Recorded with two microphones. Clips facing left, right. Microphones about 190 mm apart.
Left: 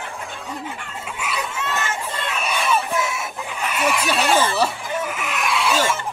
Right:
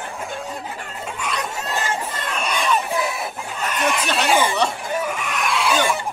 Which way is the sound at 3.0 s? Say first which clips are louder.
Right 2 dB; 35° right (ahead or behind).